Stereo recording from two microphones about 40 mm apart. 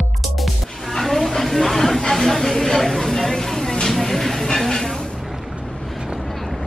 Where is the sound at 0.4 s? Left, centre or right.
Centre.